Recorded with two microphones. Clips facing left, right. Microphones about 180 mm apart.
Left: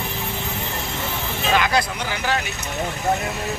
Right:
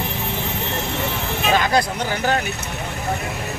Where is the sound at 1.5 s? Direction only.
40° right (ahead or behind).